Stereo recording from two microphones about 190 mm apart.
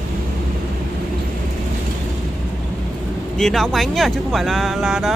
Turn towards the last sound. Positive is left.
turn(degrees=0)  # may be behind; listen again after turning